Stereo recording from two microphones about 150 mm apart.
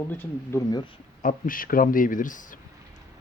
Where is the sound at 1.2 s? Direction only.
70° left (ahead or behind).